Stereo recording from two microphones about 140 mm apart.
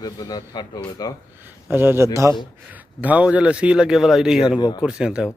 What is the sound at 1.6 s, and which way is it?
A man's voice, 15° right (ahead or behind).